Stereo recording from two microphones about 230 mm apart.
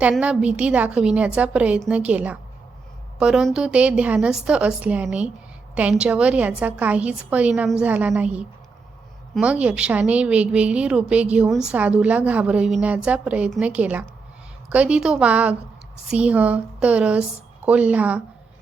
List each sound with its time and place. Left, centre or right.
0.0 s a woman's voice: centre